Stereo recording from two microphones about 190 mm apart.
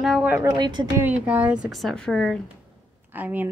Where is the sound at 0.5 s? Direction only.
25° right (ahead or behind).